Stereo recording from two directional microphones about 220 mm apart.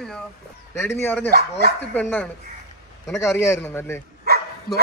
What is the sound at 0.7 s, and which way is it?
A man's voice, 10° left (ahead or behind).